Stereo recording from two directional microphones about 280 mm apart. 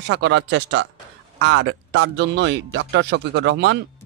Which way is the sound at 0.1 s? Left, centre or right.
Right.